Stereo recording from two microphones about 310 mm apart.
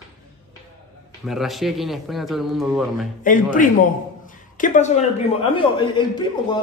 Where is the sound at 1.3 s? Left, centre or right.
Centre.